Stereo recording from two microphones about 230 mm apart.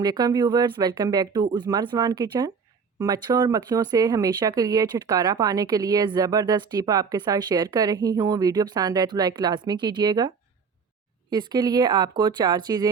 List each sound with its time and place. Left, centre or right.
0.0 s speech: centre